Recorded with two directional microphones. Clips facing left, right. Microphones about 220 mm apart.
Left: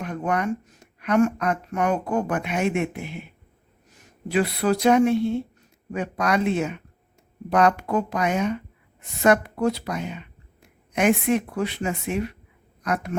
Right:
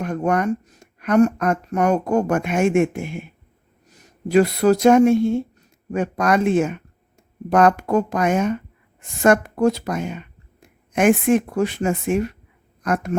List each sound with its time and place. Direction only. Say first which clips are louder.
0.0 s speech: right 5 dB; 45° right (ahead or behind)